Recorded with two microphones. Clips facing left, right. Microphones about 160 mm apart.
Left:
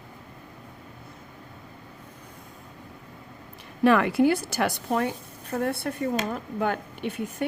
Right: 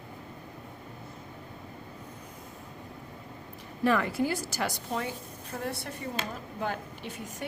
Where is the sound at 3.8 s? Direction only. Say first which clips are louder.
Left 7 dB; 70° left (ahead or behind).